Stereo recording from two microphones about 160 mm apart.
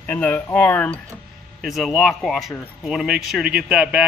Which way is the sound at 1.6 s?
Centre (ahead or behind).